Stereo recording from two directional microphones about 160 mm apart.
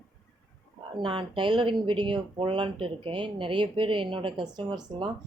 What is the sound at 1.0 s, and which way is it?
A woman's voice, 35° right (ahead or behind).